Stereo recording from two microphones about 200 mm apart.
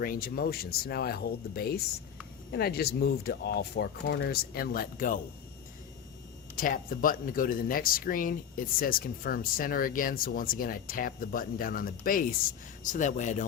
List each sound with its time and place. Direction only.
0.0 s speech: 45° left (ahead or behind)
6.6 s speech: 45° left (ahead or behind)